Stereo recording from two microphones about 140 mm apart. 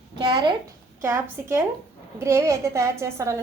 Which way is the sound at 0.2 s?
30° right (ahead or behind).